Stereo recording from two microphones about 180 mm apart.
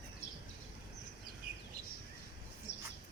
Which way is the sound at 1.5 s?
60° right (ahead or behind).